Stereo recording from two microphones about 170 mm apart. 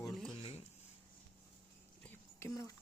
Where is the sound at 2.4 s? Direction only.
20° left (ahead or behind).